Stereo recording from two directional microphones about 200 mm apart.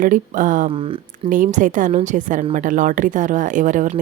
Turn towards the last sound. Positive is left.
turn(degrees=-40)  # may be behind; listen again after turning